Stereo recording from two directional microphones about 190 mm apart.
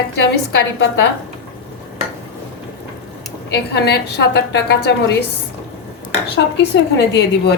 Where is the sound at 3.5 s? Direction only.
60° left (ahead or behind).